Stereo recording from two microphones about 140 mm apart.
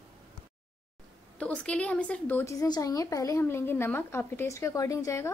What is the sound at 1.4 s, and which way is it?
A woman's voice, 10° left (ahead or behind).